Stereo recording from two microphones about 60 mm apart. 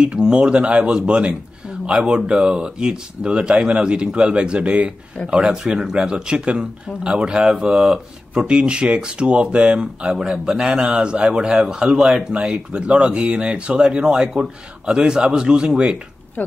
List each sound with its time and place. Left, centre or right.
0.0 s speech: centre
16.4 s speech: left